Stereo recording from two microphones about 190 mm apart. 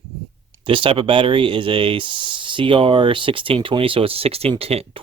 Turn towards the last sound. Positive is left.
turn(degrees=-30)  # may be behind; listen again after turning